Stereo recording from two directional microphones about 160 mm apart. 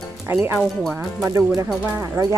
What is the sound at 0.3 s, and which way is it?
Speech, 15° right (ahead or behind).